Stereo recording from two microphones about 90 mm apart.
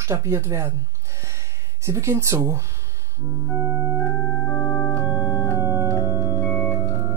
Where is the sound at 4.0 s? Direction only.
25° left (ahead or behind).